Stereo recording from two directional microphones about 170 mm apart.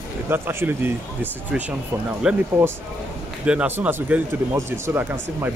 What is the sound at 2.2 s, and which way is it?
Speech, 5° right (ahead or behind).